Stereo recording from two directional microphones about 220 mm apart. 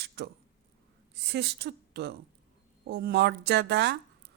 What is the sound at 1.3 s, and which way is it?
Speech, 50° right (ahead or behind).